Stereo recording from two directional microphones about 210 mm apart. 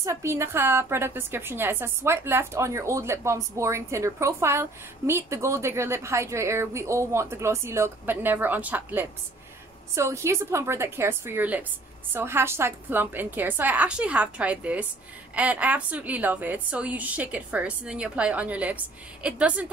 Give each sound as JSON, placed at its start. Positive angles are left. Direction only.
{"t": 0.0, "sound": "a woman's voice", "side_deg": -15}